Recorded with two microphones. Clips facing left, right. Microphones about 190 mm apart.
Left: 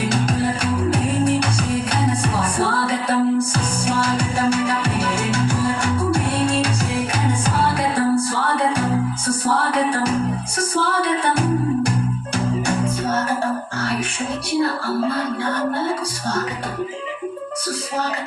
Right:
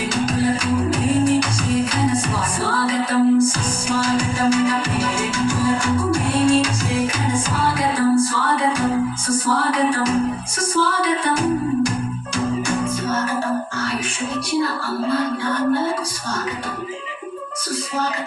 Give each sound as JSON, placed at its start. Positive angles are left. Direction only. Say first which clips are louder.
{"t": 0.1, "sound": "music", "louder": "right 1 dB", "side_deg": 60}
{"t": 7.8, "sound": "music", "louder": "right 5 dB", "side_deg": 60}